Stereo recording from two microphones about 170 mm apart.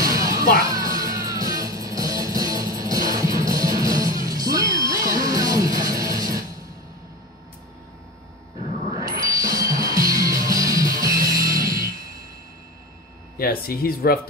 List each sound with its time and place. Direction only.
0.0 s music: 20° right (ahead or behind)
8.9 s music: 20° right (ahead or behind)
13.4 s speech: 60° left (ahead or behind)